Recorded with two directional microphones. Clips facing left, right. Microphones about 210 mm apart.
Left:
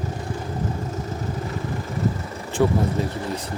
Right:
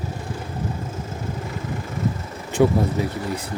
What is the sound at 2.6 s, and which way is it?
Speech, 5° right (ahead or behind).